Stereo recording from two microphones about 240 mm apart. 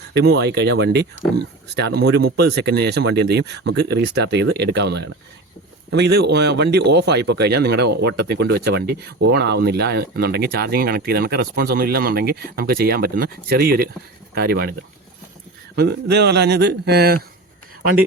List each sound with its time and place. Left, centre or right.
0.1 s speech: right